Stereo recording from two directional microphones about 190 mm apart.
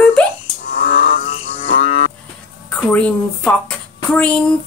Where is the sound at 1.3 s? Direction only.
30° left (ahead or behind).